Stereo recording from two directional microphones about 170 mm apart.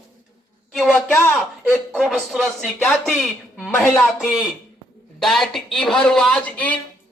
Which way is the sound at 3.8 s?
10° left (ahead or behind).